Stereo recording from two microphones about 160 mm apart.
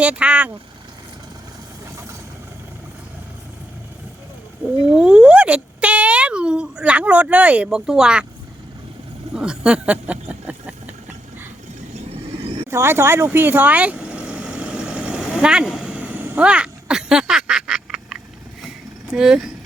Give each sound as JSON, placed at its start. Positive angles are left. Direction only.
{"t": 0.0, "sound": "speech", "side_deg": -10}
{"t": 4.9, "sound": "speech", "side_deg": -5}
{"t": 9.3, "sound": "a sound", "side_deg": -5}
{"t": 12.0, "sound": "vehicle", "side_deg": -35}
{"t": 12.7, "sound": "vehicle", "side_deg": -15}
{"t": 19.1, "sound": "speech", "side_deg": -5}